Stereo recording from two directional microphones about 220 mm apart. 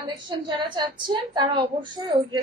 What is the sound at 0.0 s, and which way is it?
A woman's voice, 20° right (ahead or behind).